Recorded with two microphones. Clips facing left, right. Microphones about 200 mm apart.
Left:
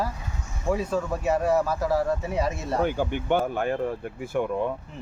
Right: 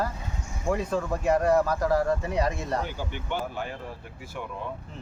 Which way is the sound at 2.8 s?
55° left (ahead or behind).